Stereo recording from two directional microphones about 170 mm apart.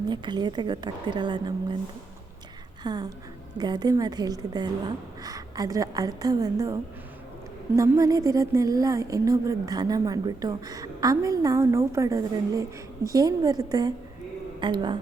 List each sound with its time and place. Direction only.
0.1 s speech: 25° right (ahead or behind)
2.8 s speech: 25° right (ahead or behind)
7.8 s speech: 20° right (ahead or behind)